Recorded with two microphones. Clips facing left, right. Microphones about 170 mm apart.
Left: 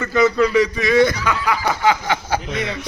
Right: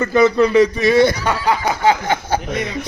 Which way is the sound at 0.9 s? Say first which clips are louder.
Right 2 dB; 30° right (ahead or behind).